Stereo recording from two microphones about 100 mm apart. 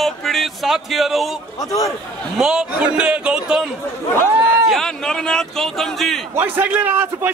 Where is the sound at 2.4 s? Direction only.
10° right (ahead or behind).